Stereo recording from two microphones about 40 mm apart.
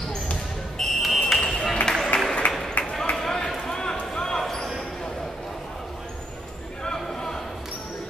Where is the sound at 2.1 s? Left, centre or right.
Left.